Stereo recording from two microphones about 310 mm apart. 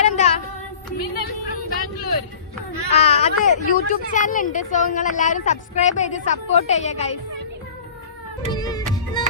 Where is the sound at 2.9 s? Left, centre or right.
Centre.